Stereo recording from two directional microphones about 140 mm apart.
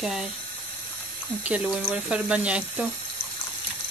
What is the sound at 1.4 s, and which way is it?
Speech, 10° right (ahead or behind).